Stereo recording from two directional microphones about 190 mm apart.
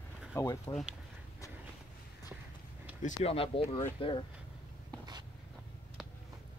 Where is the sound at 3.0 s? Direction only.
30° left (ahead or behind).